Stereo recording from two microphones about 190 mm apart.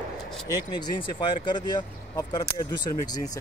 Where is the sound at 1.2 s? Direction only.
25° left (ahead or behind).